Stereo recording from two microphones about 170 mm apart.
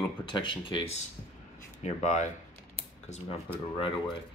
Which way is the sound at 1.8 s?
45° left (ahead or behind).